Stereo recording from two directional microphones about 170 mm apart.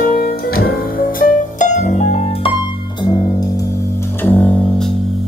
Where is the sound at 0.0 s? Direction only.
60° left (ahead or behind); by 3.4 s 25° left (ahead or behind).